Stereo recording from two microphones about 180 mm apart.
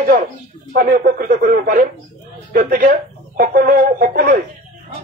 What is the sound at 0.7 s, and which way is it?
Speech, 55° right (ahead or behind).